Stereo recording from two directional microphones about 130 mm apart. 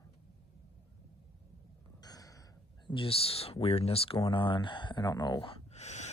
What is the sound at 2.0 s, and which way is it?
Gasp, 30° left (ahead or behind).